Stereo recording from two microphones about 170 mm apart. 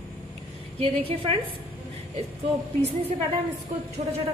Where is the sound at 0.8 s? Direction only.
35° right (ahead or behind).